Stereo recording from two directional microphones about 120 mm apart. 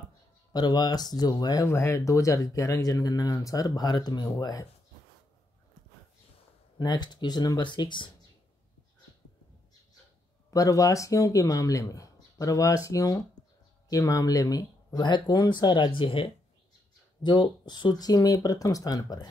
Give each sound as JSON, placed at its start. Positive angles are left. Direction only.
{"t": 0.5, "sound": "speech", "side_deg": 35}
{"t": 6.8, "sound": "speech", "side_deg": 35}
{"t": 10.5, "sound": "speech", "side_deg": 30}